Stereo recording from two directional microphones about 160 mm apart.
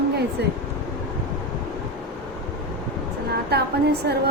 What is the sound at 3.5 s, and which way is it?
Speech, 85° right.